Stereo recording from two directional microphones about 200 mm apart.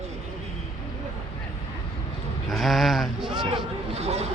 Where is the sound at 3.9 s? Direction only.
30° right (ahead or behind).